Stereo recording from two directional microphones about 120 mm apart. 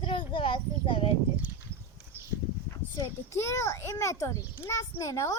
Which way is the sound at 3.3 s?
20° left (ahead or behind).